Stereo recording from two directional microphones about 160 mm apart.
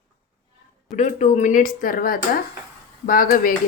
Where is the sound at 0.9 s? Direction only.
45° left (ahead or behind); by 3.6 s 60° left (ahead or behind).